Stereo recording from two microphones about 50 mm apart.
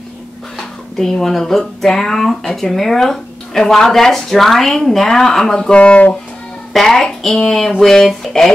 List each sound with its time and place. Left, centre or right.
0.6 s speech: centre
5.8 s speech: left
6.7 s speech: centre